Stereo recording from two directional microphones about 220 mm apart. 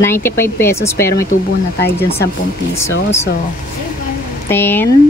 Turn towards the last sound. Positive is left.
turn(degrees=10)  # may be behind; listen again after turning